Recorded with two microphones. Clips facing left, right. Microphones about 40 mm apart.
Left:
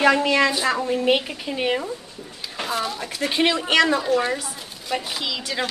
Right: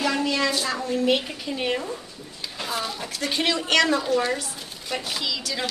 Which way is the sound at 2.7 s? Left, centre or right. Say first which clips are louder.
Left 3 dB; centre.